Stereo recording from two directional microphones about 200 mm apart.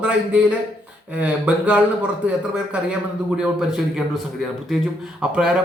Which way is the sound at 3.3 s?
5° right (ahead or behind).